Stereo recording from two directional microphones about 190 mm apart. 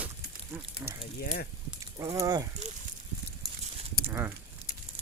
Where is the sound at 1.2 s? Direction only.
50° left (ahead or behind).